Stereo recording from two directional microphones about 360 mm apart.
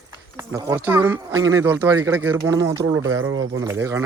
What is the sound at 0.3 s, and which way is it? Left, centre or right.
Speech, centre.